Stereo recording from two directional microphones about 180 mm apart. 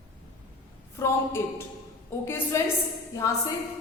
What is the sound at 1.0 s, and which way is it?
A woman's voice, 15° left (ahead or behind).